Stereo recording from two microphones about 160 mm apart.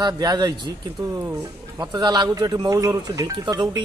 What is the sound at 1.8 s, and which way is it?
A man's voice, 25° right (ahead or behind).